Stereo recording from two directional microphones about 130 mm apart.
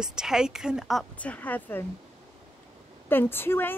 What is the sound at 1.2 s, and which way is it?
Speech, 10° left (ahead or behind).